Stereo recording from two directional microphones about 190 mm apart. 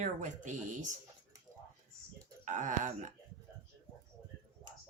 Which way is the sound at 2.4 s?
40° right (ahead or behind).